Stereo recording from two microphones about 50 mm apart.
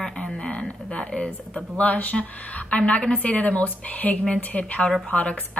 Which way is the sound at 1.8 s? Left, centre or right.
Left.